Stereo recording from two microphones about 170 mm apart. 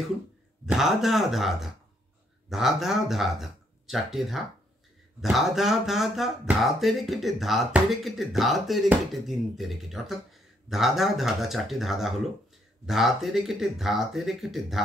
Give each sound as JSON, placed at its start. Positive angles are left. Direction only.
{"t": 0.7, "sound": "speech", "side_deg": 0}